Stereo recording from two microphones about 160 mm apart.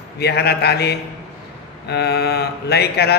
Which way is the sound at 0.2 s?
90° left.